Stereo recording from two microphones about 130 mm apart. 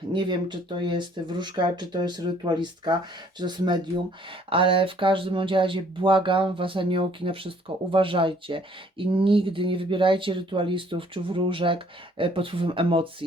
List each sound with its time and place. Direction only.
0.1 s speech: 35° right (ahead or behind)